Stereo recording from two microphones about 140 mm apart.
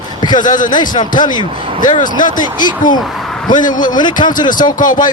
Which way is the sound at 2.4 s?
30° left (ahead or behind).